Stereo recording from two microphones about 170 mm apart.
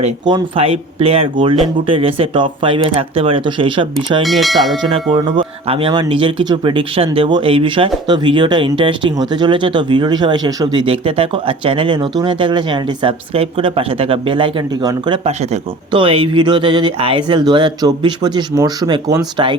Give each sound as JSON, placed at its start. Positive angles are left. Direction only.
{"t": 0.3, "sound": "speech", "side_deg": -30}
{"t": 4.2, "sound": "speech", "side_deg": 0}
{"t": 4.8, "sound": "speech", "side_deg": -30}